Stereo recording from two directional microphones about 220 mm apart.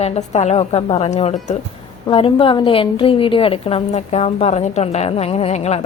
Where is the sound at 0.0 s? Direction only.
30° left (ahead or behind).